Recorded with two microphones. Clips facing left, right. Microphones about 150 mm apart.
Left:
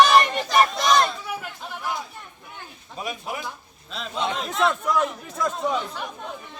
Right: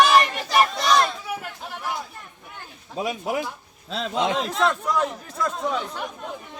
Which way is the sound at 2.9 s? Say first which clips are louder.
Right 6 dB; 90° right.